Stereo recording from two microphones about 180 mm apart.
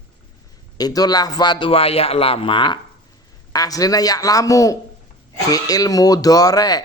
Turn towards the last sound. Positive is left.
turn(degrees=20)  # may be behind; listen again after turning